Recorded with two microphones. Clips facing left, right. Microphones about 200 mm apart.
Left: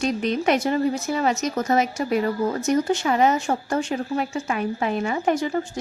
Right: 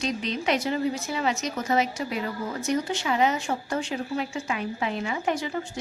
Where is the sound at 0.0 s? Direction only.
50° left (ahead or behind).